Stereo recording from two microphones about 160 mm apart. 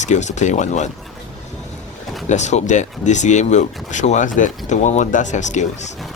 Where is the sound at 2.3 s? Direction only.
45° left (ahead or behind).